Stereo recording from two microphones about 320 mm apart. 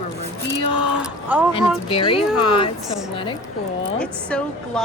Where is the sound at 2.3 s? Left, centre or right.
Left.